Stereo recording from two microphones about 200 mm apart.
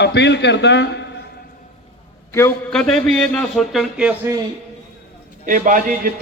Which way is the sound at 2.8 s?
Centre (ahead or behind).